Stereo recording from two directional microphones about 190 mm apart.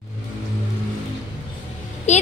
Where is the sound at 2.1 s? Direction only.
40° left (ahead or behind).